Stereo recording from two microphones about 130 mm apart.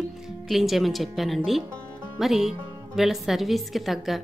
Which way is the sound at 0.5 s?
Centre (ahead or behind).